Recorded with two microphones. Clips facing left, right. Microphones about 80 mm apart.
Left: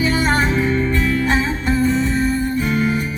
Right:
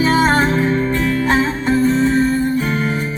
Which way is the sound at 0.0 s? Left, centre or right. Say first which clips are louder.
Right 4 dB; right.